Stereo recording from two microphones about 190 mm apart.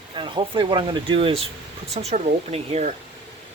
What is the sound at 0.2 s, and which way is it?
Speech, 25° right (ahead or behind).